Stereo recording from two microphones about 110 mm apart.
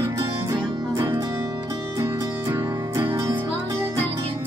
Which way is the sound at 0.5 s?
45° right (ahead or behind).